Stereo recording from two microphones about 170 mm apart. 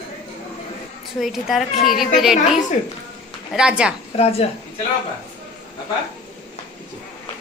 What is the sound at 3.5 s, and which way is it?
Speech, 5° right (ahead or behind).